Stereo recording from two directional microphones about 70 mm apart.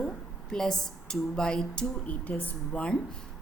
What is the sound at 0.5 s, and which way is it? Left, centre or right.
Speech, centre.